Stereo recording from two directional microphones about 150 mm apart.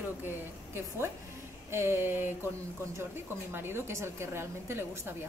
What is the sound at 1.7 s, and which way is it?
A woman's voice, 15° right (ahead or behind).